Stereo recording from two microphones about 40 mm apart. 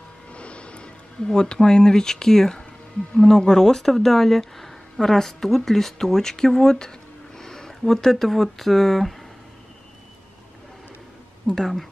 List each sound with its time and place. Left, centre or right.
0.3 s music: left
1.2 s speech: left
11.4 s speech: centre